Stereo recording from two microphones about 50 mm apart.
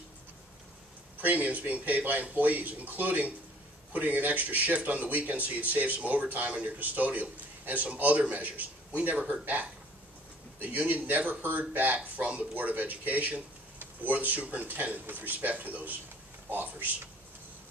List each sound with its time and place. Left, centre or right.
1.2 s speech: right
10.9 s a man's voice: right